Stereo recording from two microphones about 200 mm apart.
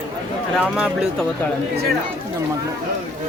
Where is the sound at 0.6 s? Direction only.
5° right (ahead or behind).